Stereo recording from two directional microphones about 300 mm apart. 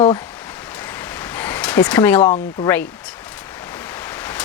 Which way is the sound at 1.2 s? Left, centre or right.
Centre.